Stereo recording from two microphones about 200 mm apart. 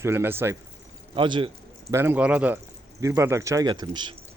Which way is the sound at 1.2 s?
25° right (ahead or behind).